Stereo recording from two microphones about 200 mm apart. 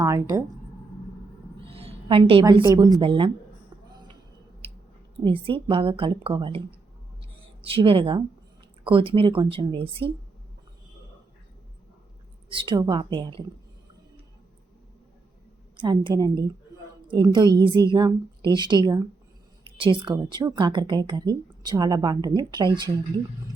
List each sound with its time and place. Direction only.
0.0 s speech: 15° right (ahead or behind)
1.6 s a sound: 30° right (ahead or behind)
2.6 s speech: 20° right (ahead or behind)
4.6 s clicking: 30° right (ahead or behind)
5.2 s speech: 25° right (ahead or behind)
12.5 s speech: 25° right (ahead or behind)
15.7 s speech: 25° right (ahead or behind)